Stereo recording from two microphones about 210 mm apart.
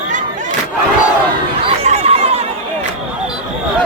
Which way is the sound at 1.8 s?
30° right (ahead or behind).